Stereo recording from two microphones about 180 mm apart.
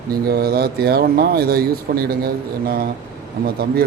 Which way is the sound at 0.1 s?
60° right (ahead or behind).